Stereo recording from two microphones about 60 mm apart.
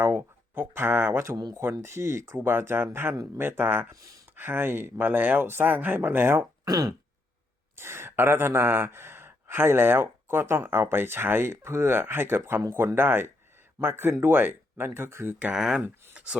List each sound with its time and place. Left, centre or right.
0.0 s speech: right
3.9 s speech: right
4.4 s speech: right
6.7 s a sound: right
7.8 s speech: right
15.5 s speech: centre
16.1 s a sound: centre